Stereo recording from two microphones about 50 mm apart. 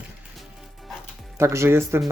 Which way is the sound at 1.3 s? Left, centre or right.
Right.